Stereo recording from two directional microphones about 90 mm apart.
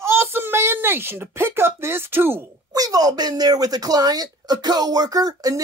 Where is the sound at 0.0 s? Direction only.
30° right (ahead or behind).